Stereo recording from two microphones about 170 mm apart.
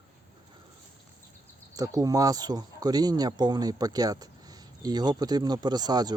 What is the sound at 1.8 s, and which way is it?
Speech, 20° right (ahead or behind).